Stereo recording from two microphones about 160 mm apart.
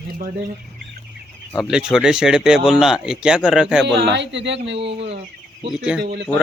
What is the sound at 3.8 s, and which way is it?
Speech, 90° right.